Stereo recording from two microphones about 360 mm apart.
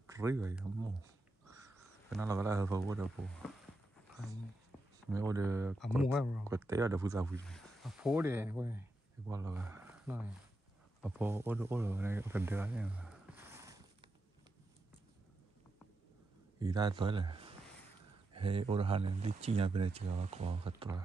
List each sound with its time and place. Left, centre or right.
0.0 s speech: centre
2.0 s speech: centre
5.1 s speech: centre
16.5 s speech: centre